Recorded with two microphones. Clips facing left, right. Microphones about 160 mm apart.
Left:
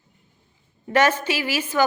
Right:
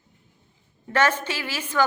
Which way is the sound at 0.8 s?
10° left (ahead or behind).